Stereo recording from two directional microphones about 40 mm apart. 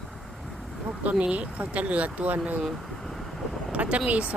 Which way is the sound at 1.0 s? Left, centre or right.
Right.